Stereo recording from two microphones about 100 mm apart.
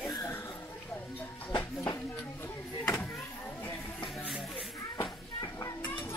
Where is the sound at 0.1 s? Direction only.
25° left (ahead or behind).